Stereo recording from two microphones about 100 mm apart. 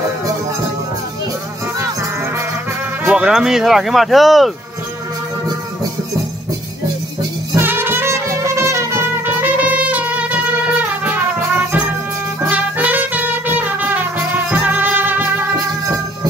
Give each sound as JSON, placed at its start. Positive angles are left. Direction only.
{"t": 3.1, "sound": "speech", "side_deg": -10}
{"t": 7.5, "sound": "music", "side_deg": -20}
{"t": 12.4, "sound": "music", "side_deg": -15}